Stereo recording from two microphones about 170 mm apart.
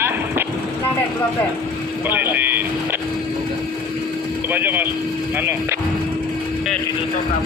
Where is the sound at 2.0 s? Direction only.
10° right (ahead or behind).